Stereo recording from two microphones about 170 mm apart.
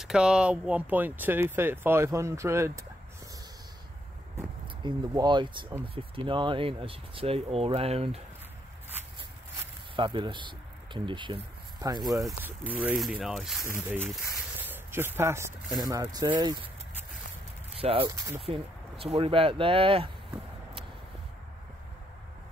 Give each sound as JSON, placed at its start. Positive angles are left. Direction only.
{"t": 0.0, "sound": "speech", "side_deg": -5}
{"t": 4.8, "sound": "speech", "side_deg": -25}
{"t": 9.9, "sound": "speech", "side_deg": -30}
{"t": 12.4, "sound": "speech", "side_deg": -10}
{"t": 14.6, "sound": "a sound", "side_deg": -10}
{"t": 15.8, "sound": "speech", "side_deg": -25}
{"t": 17.7, "sound": "speech", "side_deg": -35}
{"t": 18.0, "sound": "speech", "side_deg": -15}
{"t": 18.4, "sound": "speech", "side_deg": -35}